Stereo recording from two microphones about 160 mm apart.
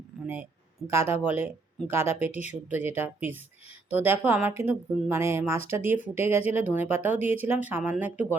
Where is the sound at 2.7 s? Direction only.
15° right (ahead or behind).